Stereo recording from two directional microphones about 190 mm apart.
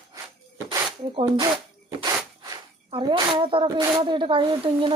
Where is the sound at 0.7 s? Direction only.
25° right (ahead or behind).